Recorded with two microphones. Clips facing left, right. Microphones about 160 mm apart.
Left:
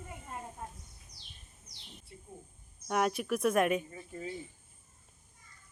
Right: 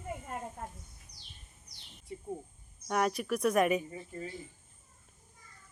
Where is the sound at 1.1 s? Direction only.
90° left.